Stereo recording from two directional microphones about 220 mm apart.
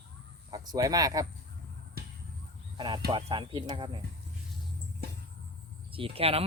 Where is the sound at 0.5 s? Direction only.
15° right (ahead or behind).